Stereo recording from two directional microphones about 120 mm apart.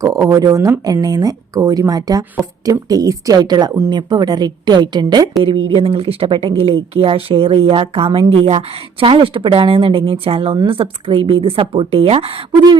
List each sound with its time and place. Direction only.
0.0 s a woman's voice: 30° right (ahead or behind)
5.4 s speech: 50° right (ahead or behind)